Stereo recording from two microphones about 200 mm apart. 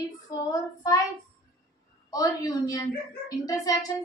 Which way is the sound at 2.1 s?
20° left (ahead or behind).